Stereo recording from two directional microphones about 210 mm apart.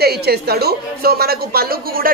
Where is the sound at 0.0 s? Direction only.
50° right (ahead or behind).